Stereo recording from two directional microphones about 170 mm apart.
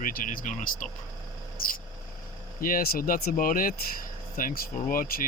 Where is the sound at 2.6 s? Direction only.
60° left (ahead or behind).